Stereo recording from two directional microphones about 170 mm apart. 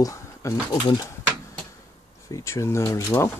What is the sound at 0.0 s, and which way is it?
Speech, 20° left (ahead or behind).